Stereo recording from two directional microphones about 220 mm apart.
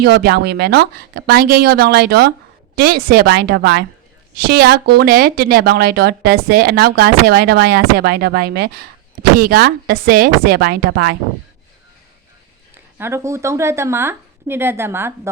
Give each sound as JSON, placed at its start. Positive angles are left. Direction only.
{"t": 0.0, "sound": "speech", "side_deg": -45}
{"t": 13.0, "sound": "speech", "side_deg": -10}